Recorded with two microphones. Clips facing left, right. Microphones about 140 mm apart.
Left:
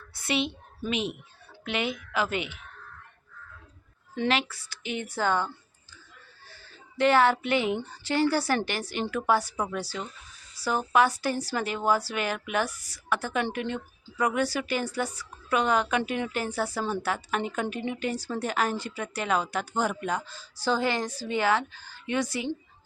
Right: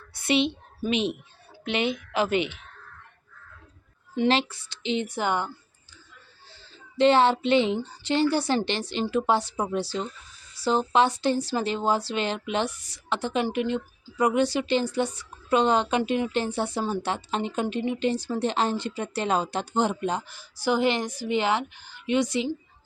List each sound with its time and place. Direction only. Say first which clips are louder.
0.1 s a woman's voice: right 5 dB; 20° right (ahead or behind)
4.3 s speech: right 3 dB; 25° right (ahead or behind)
6.5 s speech: right 2 dB; 25° right (ahead or behind)
20.2 s speech: right 2 dB; 15° right (ahead or behind)